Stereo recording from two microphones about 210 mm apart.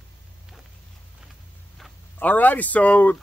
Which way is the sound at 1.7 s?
5° left (ahead or behind).